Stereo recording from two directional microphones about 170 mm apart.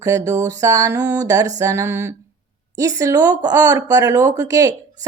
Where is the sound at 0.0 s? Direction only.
20° right (ahead or behind).